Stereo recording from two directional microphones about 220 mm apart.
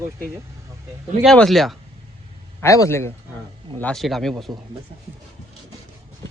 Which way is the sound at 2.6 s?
15° left (ahead or behind).